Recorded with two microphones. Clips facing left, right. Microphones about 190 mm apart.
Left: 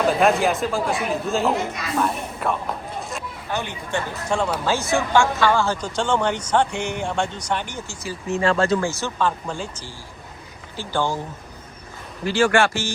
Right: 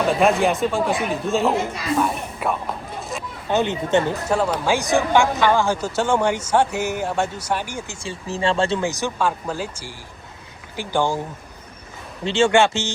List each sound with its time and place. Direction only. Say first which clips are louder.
0.2 s speech: right 1 dB; centre (ahead or behind)
3.0 s a sound: right 1 dB; centre (ahead or behind)
3.5 s speech: right 8 dB; 20° right (ahead or behind)
4.3 s speech: left 2 dB; 5° right (ahead or behind)
8.0 s speech: left 2 dB; 30° right (ahead or behind)
12.2 s speech: right 2 dB; 25° right (ahead or behind)